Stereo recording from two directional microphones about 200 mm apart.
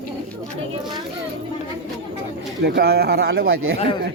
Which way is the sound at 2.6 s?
55° right (ahead or behind).